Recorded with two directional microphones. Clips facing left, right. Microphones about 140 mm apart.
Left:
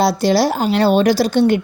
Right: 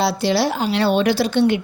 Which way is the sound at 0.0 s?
45° left (ahead or behind).